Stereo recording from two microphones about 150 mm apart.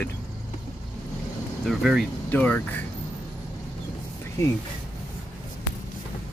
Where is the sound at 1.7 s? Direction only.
Centre (ahead or behind).